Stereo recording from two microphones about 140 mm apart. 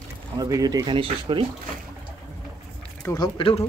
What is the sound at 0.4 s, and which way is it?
Speech, 25° right (ahead or behind).